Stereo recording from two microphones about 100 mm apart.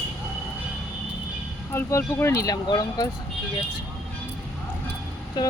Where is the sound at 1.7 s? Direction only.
25° left (ahead or behind).